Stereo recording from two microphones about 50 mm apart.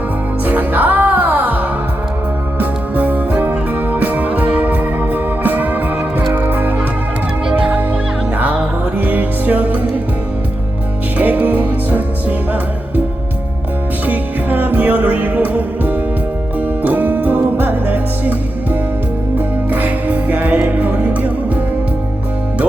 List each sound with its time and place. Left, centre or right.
0.4 s music: right
9.0 s music: right
11.2 s music: right
14.1 s music: right